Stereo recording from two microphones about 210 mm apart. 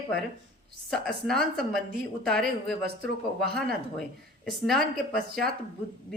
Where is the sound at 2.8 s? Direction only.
50° right (ahead or behind).